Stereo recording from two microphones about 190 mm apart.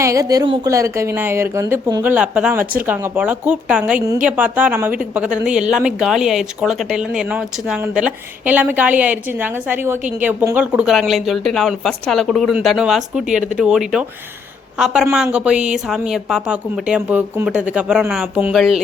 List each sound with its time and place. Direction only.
0.0 s a woman's voice: 15° right (ahead or behind)